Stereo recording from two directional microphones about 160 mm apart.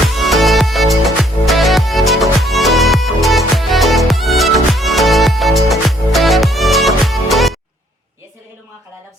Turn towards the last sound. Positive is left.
turn(degrees=0)  # may be behind; listen again after turning